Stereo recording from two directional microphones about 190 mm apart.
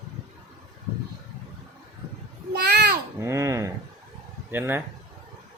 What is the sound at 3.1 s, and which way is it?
Babbling, 15° right (ahead or behind).